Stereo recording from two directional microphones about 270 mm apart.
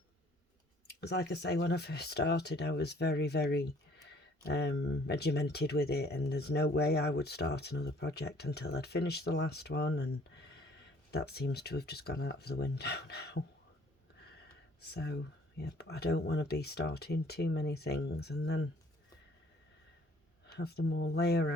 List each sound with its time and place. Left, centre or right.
1.0 s speech: left
14.8 s speech: left
20.5 s speech: left